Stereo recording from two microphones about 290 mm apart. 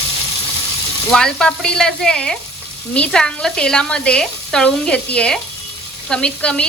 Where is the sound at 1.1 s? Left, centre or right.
Centre.